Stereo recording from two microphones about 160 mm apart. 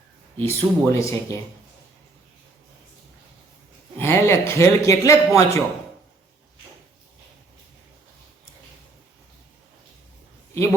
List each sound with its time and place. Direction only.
0.3 s a man's voice: 15° left (ahead or behind)
3.9 s a man's voice: 15° left (ahead or behind)